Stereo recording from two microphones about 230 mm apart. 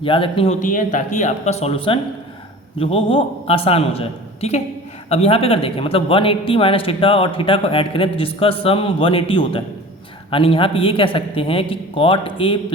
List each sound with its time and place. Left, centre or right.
0.0 s a man's voice: left